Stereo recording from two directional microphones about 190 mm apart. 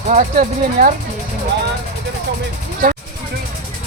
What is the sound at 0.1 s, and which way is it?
Speech, 40° right (ahead or behind).